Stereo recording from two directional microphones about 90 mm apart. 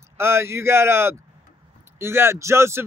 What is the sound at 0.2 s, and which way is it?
Speech, 30° right (ahead or behind).